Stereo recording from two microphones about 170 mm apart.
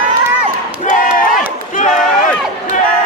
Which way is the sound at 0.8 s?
50° left (ahead or behind).